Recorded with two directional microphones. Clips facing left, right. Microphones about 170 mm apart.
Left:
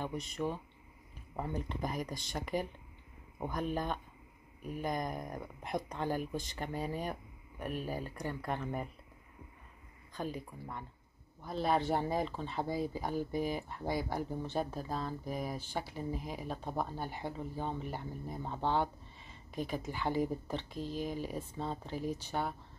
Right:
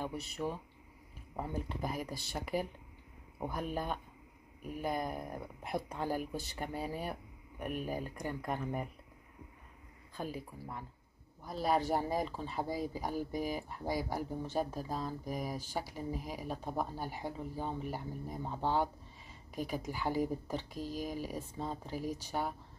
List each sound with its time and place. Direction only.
0.0 s speech: 5° right (ahead or behind)
10.1 s speech: 5° right (ahead or behind)